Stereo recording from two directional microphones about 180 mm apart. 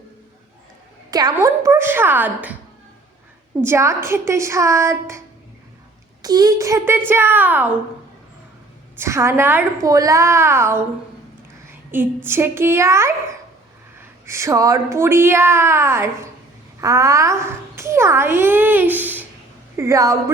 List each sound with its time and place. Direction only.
1.1 s a child's voice: 20° right (ahead or behind)
3.6 s a child's voice: 15° right (ahead or behind)
6.2 s a child's voice: 20° right (ahead or behind)
9.0 s a child's voice: 15° right (ahead or behind)
14.3 s a child's voice: 15° right (ahead or behind)